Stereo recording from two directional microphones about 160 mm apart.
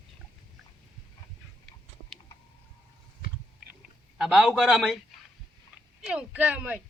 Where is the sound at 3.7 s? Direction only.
5° right (ahead or behind).